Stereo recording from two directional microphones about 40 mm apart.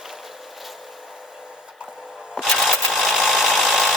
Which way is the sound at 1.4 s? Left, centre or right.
Right.